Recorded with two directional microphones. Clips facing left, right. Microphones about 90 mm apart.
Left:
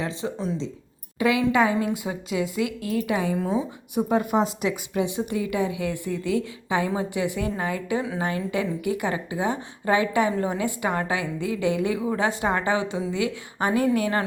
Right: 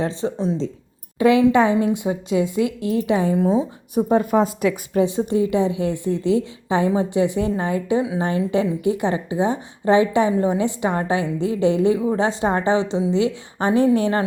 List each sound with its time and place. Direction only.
1.2 s a woman's voice: 30° right (ahead or behind)